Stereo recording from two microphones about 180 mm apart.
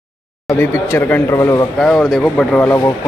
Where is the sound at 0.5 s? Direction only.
10° left (ahead or behind).